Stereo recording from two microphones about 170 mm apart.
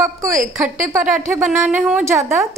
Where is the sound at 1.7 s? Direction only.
10° right (ahead or behind).